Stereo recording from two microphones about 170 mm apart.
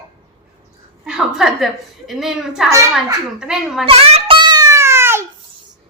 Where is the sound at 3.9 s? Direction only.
35° right (ahead or behind); by 5.3 s 15° right (ahead or behind).